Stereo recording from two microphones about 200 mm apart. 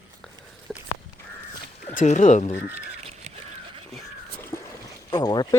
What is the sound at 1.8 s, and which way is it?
Speech, 40° left (ahead or behind).